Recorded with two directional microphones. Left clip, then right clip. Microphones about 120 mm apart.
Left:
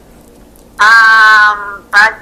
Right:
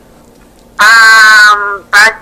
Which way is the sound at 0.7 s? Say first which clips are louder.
Right 2 dB; 45° right (ahead or behind).